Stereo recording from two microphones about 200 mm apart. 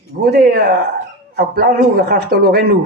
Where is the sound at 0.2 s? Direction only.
50° right (ahead or behind).